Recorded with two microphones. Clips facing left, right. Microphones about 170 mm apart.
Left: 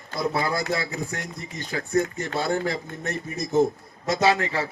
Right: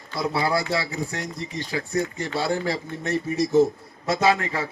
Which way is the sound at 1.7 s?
50° left (ahead or behind).